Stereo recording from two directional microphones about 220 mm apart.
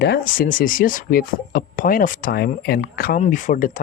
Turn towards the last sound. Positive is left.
turn(degrees=35)  # may be behind; listen again after turning